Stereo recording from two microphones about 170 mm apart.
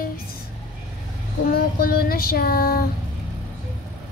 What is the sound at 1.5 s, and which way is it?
Child singing, 60° left (ahead or behind).